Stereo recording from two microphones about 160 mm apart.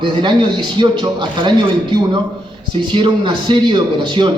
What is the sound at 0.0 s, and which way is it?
A man's voice, 30° right (ahead or behind).